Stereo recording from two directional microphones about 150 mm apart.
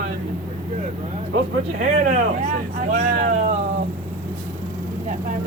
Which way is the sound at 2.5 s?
60° right (ahead or behind).